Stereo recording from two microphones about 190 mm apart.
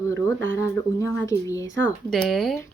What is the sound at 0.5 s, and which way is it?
Speech, 15° left (ahead or behind).